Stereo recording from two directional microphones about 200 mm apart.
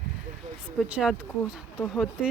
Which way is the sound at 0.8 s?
5° right (ahead or behind).